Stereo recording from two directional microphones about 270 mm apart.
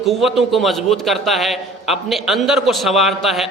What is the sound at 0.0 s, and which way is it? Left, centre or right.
A man's voice, centre.